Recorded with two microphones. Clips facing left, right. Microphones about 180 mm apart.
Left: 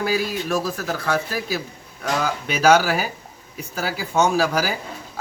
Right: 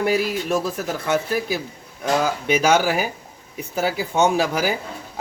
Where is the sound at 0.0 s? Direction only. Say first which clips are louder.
Right 2 dB; 25° right (ahead or behind).